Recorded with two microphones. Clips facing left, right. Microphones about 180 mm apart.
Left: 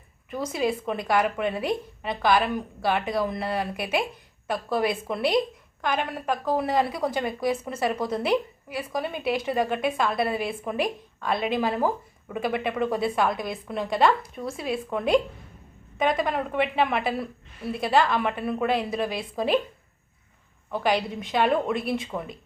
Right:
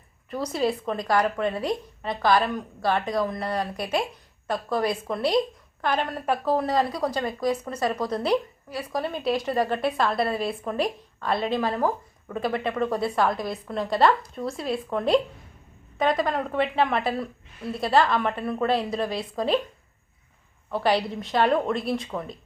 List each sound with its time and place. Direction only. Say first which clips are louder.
0.3 s speech: right 1 dB; centre (ahead or behind)
1.1 s speech: right 1 dB; 20° left (ahead or behind)
1.5 s speech: even; centre (ahead or behind)
6.7 s speech: even; 20° left (ahead or behind)
7.3 s speech: even; 5° left (ahead or behind)
20.7 s speech: right 1 dB; centre (ahead or behind)